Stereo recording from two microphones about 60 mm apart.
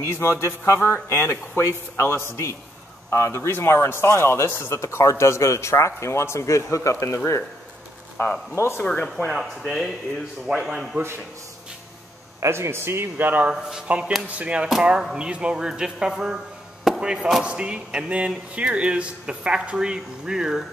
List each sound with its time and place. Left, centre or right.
0.0 s speech: left
1.0 s speech: left
8.5 s speech: left
8.8 s speech: centre
9.7 s speech: centre
12.4 s speech: right
13.5 s speech: centre